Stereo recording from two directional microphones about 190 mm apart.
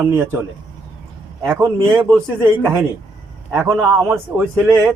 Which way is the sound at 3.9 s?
Centre (ahead or behind).